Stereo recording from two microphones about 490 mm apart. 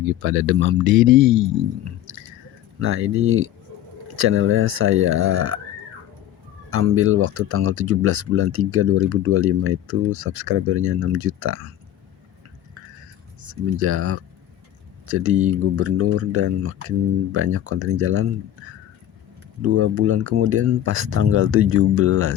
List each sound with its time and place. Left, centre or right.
0.0 s speech: right
6.7 s speech: right
13.4 s speech: right
19.6 s speech: right